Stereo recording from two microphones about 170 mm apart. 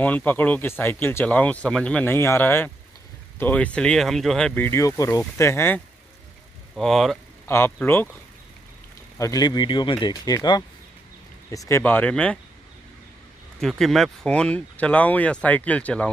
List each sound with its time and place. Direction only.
0.0 s speech: 10° left (ahead or behind)
6.7 s speech: centre (ahead or behind)
7.4 s speech: 15° left (ahead or behind)
9.2 s speech: 20° left (ahead or behind)
13.6 s speech: centre (ahead or behind)